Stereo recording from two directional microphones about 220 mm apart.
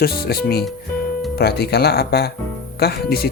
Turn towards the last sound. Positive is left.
turn(degrees=45)  # may be behind; listen again after turning